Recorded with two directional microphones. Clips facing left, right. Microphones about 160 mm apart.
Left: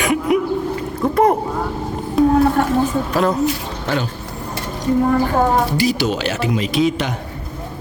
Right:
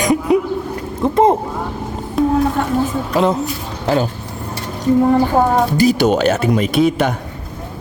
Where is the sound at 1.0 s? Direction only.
25° right (ahead or behind).